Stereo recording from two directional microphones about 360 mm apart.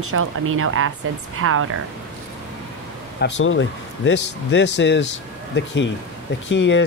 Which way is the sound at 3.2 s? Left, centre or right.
Left.